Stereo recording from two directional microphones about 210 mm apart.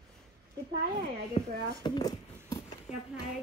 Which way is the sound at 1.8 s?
20° left (ahead or behind).